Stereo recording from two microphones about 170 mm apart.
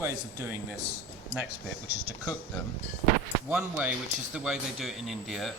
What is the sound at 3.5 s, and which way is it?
Speech, 5° right (ahead or behind).